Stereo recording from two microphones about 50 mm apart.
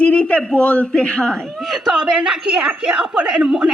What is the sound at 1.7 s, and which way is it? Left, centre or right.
A woman's voice, centre.